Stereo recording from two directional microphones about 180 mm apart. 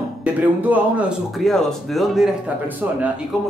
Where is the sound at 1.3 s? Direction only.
Centre (ahead or behind).